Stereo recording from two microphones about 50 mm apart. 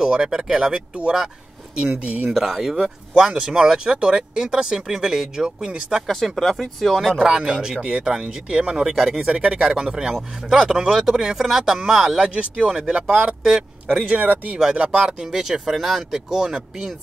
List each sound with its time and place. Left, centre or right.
0.0 s speech: centre
2.0 s speech: right
2.3 s speech: centre
6.0 s speech: centre
7.2 s speech: centre
9.3 s speech: centre
14.0 s speech: right
14.6 s speech: centre